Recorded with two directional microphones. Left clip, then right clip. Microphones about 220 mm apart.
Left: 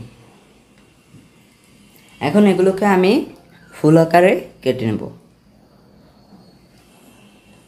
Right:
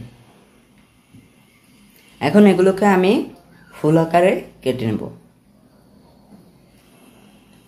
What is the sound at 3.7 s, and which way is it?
Speech, 20° left (ahead or behind).